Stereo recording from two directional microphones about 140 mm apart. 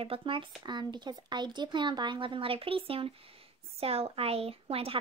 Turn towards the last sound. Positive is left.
turn(degrees=-45)  # may be behind; listen again after turning